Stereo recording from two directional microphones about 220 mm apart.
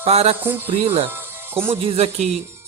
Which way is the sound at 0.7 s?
25° right (ahead or behind).